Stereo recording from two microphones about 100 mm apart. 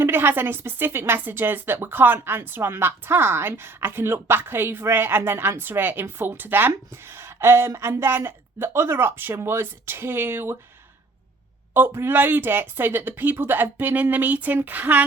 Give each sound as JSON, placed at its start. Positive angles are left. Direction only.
{"t": 0.0, "sound": "a woman's voice", "side_deg": -20}
{"t": 11.7, "sound": "a woman's voice", "side_deg": -20}